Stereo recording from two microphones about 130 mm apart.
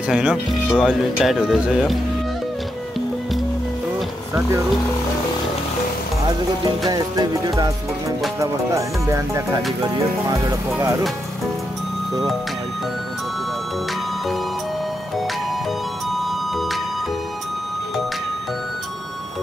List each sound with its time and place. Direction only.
0.1 s speech: 5° right (ahead or behind)
6.9 s speech: 30° right (ahead or behind)
16.1 s music: centre (ahead or behind)